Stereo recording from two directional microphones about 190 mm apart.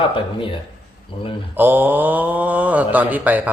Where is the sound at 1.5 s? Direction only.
10° right (ahead or behind).